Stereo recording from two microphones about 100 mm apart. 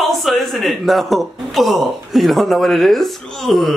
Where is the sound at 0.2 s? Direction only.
Centre (ahead or behind).